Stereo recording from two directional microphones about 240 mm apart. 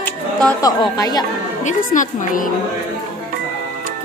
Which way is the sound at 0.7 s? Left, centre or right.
Centre.